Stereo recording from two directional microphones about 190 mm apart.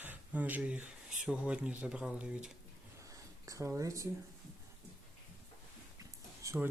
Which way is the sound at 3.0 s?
15° right (ahead or behind).